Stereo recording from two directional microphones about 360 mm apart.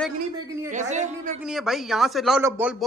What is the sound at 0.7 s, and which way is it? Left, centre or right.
Speech, centre.